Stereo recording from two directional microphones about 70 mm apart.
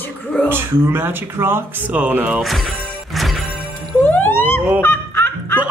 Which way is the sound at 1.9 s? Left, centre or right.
Right.